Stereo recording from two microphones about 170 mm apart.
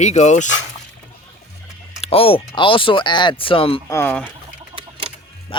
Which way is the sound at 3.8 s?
15° left (ahead or behind).